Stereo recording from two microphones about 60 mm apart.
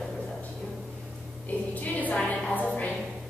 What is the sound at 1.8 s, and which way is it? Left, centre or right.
Speech, left.